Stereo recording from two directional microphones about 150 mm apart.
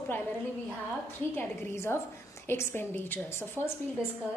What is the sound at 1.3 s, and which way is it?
A woman's voice, 15° left (ahead or behind).